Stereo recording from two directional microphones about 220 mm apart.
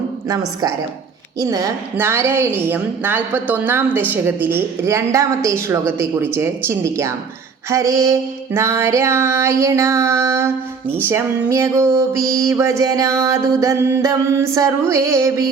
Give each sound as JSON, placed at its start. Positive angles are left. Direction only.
{"t": 0.3, "sound": "a woman's voice", "side_deg": -15}